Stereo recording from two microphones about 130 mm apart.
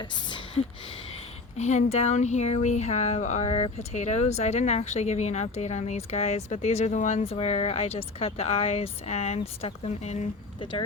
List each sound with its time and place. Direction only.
0.0 s speech: 35° left (ahead or behind)
1.5 s speech: 60° left (ahead or behind)
10.6 s speech: 35° left (ahead or behind)